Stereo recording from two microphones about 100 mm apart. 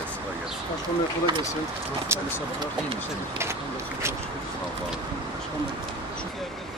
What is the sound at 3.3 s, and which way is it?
Speech, 25° right (ahead or behind).